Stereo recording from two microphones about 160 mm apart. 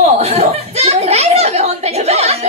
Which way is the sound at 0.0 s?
40° right (ahead or behind).